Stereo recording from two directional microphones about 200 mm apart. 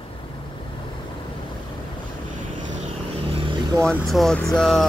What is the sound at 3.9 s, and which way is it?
Speech, centre (ahead or behind).